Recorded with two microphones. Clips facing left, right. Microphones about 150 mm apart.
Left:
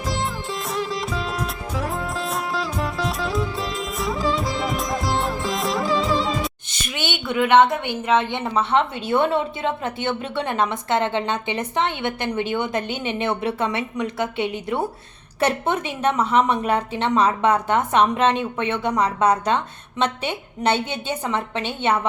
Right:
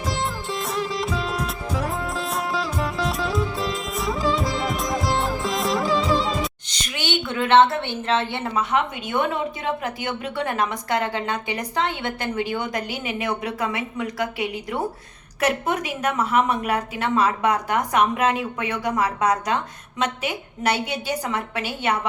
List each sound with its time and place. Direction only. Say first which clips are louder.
0.0 s music: even; centre (ahead or behind)
7.1 s a woman's voice: left 1 dB; 15° left (ahead or behind)
8.5 s a woman's voice: left 3 dB; 35° left (ahead or behind)